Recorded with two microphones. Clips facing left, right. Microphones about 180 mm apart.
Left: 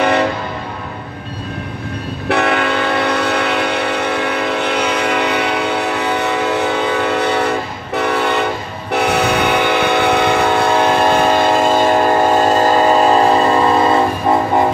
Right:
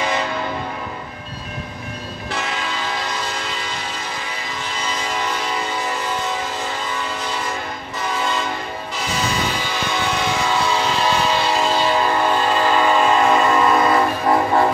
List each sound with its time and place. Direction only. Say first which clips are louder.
0.0 s train: left 8 dB; 65° left (ahead or behind)
2.2 s train: left 12 dB; 65° left (ahead or behind); by 14.0 s 30° left (ahead or behind)